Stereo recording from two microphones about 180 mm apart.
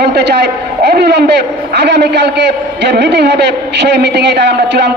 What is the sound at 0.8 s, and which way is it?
A man's voice, 70° right (ahead or behind).